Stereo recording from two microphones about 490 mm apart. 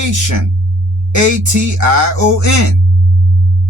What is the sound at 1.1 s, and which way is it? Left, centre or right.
Speech, right.